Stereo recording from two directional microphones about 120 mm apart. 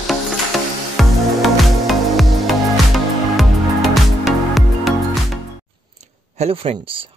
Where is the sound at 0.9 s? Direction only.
Centre (ahead or behind).